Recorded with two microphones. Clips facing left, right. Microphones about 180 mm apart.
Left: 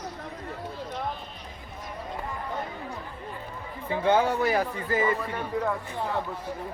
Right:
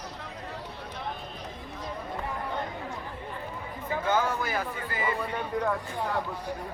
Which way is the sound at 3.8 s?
25° left (ahead or behind).